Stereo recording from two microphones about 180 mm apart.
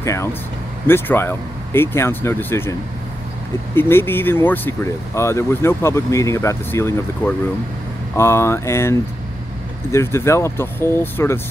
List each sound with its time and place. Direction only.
0.0 s speech: 15° left (ahead or behind)
3.7 s speech: 10° left (ahead or behind)